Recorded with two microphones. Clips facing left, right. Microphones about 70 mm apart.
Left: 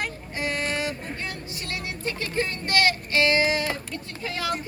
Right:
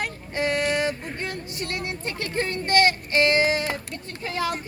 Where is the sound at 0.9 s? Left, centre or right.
Right.